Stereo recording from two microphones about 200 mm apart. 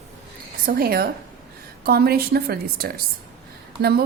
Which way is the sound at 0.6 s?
45° right (ahead or behind).